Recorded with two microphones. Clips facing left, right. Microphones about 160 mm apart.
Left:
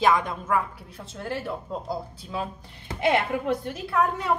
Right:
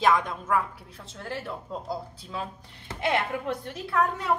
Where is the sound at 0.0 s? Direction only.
Centre (ahead or behind).